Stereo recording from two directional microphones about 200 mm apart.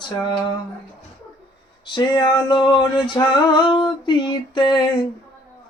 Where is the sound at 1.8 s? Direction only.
20° left (ahead or behind).